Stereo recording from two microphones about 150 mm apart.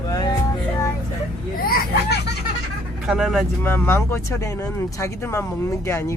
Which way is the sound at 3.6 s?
15° left (ahead or behind).